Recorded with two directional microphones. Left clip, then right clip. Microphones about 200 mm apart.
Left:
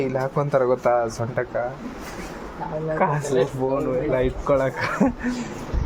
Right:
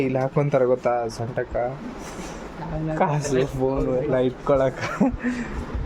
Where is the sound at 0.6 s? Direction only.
5° right (ahead or behind).